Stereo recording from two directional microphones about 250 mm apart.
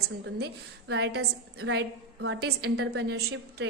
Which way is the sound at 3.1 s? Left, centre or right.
Right.